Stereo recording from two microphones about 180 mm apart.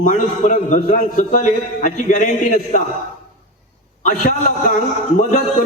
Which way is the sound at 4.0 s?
45° left (ahead or behind).